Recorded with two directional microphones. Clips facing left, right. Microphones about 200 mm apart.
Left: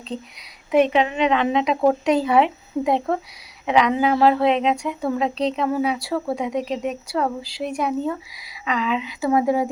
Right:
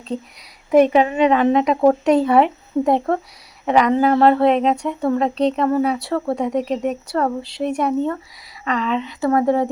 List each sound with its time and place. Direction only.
0.1 s speech: 30° right (ahead or behind)
0.9 s a woman's voice: 45° right (ahead or behind)
1.5 s speech: centre (ahead or behind)